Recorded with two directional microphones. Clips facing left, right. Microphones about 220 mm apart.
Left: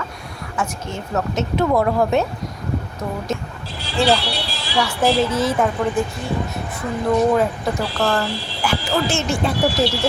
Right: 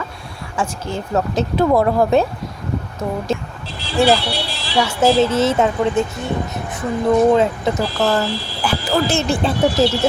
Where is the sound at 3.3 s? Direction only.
30° right (ahead or behind).